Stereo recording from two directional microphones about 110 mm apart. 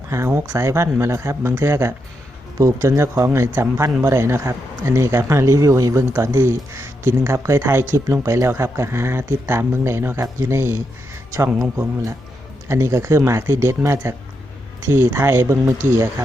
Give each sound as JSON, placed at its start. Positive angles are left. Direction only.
{"t": 0.1, "sound": "speech", "side_deg": -25}